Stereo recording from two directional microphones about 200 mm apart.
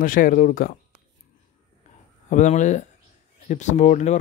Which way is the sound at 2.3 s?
40° left (ahead or behind).